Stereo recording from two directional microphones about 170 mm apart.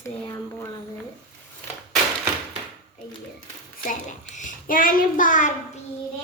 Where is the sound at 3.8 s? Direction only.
50° left (ahead or behind).